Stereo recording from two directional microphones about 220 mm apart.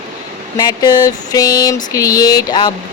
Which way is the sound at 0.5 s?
15° left (ahead or behind).